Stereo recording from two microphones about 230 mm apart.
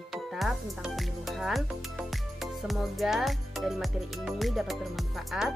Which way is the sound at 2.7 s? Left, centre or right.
Centre.